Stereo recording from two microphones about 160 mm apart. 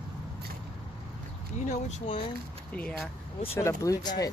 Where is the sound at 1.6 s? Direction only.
40° left (ahead or behind).